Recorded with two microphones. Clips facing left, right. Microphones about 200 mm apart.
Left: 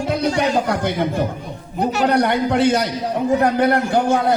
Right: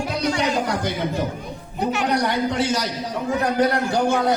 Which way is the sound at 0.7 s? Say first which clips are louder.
Left 4 dB; 55° left (ahead or behind).